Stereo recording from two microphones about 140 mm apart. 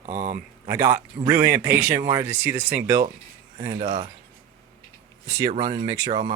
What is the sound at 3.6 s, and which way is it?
Speech, 50° right (ahead or behind).